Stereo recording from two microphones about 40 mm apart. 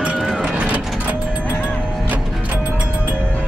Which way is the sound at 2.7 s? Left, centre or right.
Right.